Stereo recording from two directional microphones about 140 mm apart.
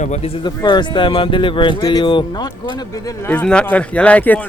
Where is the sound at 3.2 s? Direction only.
10° left (ahead or behind).